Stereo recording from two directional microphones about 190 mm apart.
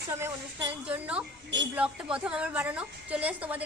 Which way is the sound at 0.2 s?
10° right (ahead or behind).